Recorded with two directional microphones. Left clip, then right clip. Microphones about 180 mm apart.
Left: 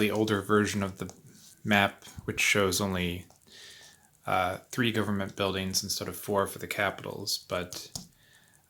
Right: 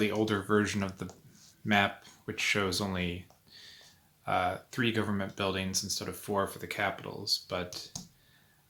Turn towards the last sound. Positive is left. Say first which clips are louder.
# left 2 dB
turn(degrees=30)  # may be behind; listen again after turning